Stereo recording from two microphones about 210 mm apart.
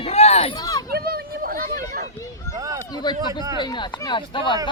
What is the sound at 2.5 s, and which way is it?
Speech, 15° right (ahead or behind).